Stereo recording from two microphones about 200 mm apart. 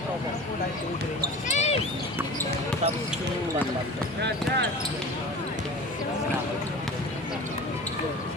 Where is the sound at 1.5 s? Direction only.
35° left (ahead or behind).